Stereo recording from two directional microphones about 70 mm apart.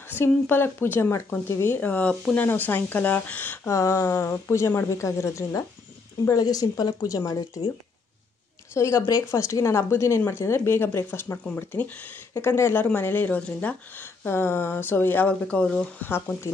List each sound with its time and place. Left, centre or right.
0.1 s speech: left
3.6 s speech: left
6.3 s speech: left
8.7 s speech: left
15.2 s speech: centre